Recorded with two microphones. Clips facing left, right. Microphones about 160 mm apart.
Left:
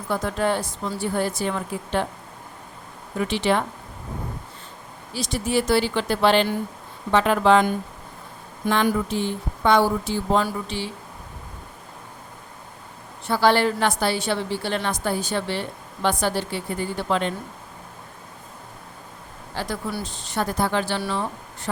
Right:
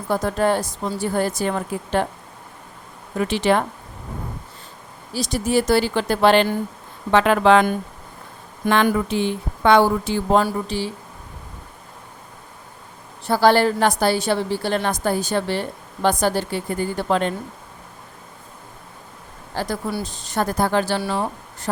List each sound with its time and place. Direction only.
0.1 s a woman's voice: 40° right (ahead or behind)
3.2 s a woman's voice: 45° right (ahead or behind)
5.1 s a woman's voice: 40° right (ahead or behind)
7.1 s a woman's voice: 75° right (ahead or behind)
8.6 s a woman's voice: 60° right (ahead or behind)
10.4 s speech: 40° right (ahead or behind)
13.2 s a woman's voice: 40° right (ahead or behind)
19.5 s a woman's voice: 40° right (ahead or behind)